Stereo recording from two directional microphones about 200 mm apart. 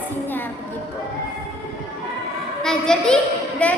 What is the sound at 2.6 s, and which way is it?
A child's voice, 5° left (ahead or behind).